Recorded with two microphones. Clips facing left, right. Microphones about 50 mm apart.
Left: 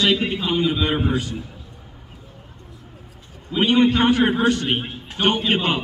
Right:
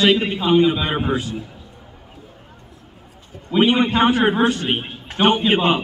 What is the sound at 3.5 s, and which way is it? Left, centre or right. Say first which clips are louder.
A man's voice: right 1 dB; centre.